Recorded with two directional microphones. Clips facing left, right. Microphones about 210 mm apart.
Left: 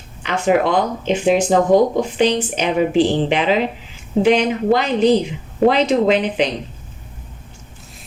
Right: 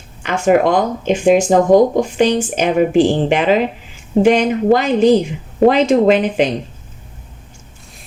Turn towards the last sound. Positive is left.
turn(degrees=-45)  # may be behind; listen again after turning